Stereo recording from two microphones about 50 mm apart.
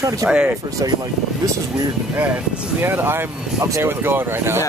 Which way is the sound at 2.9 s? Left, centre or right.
Right.